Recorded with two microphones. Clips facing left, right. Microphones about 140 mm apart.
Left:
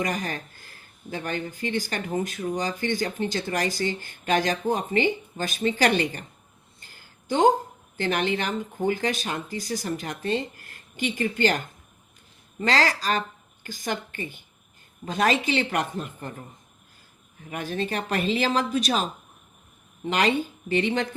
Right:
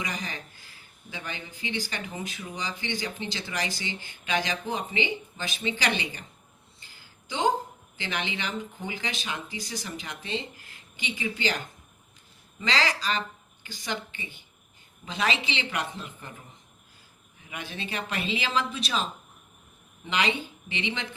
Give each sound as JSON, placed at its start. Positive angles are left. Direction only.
{"t": 0.0, "sound": "speech", "side_deg": 50}
{"t": 6.7, "sound": "a sound", "side_deg": 50}
{"t": 7.9, "sound": "speech", "side_deg": 45}
{"t": 17.5, "sound": "speech", "side_deg": 45}
{"t": 20.1, "sound": "speech", "side_deg": 45}